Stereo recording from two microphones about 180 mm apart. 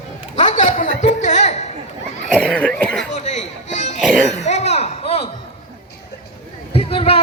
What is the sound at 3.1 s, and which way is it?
Music, 40° left (ahead or behind).